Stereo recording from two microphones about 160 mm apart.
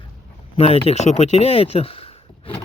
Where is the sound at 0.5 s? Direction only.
40° left (ahead or behind).